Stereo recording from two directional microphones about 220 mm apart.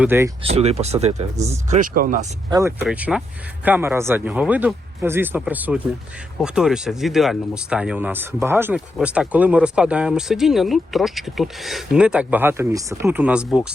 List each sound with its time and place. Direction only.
0.0 s speech: 10° right (ahead or behind)
0.4 s speech: 30° right (ahead or behind)
2.5 s speech: 15° right (ahead or behind)